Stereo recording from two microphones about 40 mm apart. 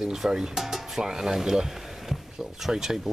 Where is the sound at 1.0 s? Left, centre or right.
Centre.